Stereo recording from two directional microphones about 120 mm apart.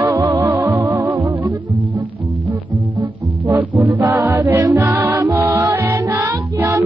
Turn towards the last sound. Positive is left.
turn(degrees=-20)  # may be behind; listen again after turning